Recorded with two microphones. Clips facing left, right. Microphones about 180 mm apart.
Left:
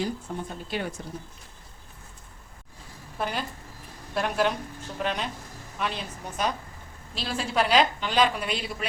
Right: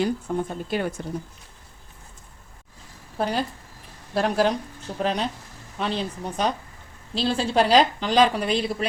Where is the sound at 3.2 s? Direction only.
35° right (ahead or behind).